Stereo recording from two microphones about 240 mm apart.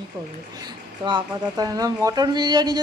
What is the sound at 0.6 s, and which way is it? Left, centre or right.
Speech, centre.